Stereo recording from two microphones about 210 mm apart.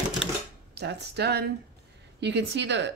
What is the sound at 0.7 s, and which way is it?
A woman's voice, 50° right (ahead or behind).